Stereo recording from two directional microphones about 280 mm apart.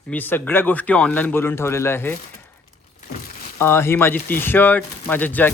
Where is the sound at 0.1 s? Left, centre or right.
Centre.